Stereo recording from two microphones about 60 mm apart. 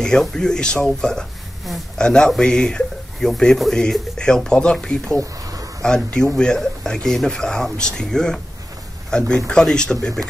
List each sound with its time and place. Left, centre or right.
0.0 s a man's voice: centre
5.2 s a sound: right
5.8 s speech: centre